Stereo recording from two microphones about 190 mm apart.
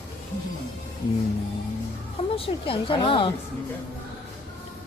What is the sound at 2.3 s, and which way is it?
Speech, 30° left (ahead or behind).